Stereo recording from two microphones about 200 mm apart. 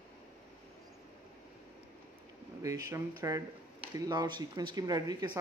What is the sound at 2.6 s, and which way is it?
Speech, 15° right (ahead or behind).